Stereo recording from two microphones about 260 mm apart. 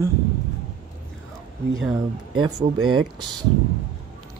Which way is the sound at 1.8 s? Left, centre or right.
Centre.